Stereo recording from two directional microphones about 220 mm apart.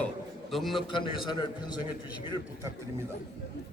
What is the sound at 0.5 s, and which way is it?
Speech, centre (ahead or behind).